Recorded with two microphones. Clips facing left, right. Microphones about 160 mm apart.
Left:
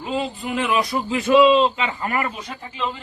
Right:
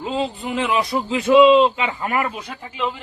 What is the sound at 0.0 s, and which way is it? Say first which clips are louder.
A man's voice: right 2 dB; 25° right (ahead or behind).